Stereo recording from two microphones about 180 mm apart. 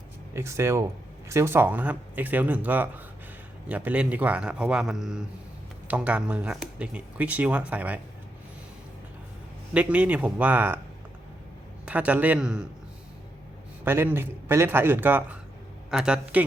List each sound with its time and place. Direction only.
0.3 s speech: 15° right (ahead or behind)
9.7 s speech: 10° right (ahead or behind)
11.9 s speech: 10° right (ahead or behind)
13.8 s speech: 10° right (ahead or behind)